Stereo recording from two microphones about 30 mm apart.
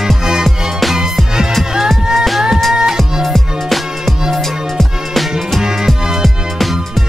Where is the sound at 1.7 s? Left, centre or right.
Centre.